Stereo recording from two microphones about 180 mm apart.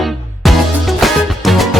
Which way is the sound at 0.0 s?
Centre (ahead or behind).